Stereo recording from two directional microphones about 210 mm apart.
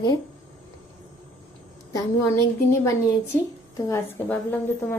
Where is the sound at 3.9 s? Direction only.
10° left (ahead or behind).